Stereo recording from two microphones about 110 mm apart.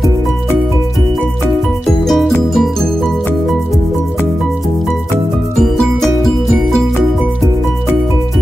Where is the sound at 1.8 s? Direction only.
5° left (ahead or behind).